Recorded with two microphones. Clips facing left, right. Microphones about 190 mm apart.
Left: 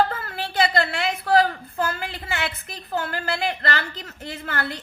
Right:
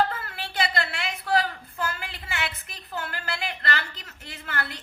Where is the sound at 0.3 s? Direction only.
40° left (ahead or behind).